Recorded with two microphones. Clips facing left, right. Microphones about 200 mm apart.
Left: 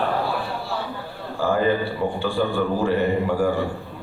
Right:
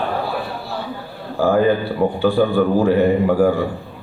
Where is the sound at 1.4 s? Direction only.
45° right (ahead or behind).